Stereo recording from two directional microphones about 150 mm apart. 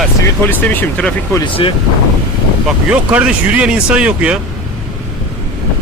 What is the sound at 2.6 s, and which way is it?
Speech, 10° right (ahead or behind).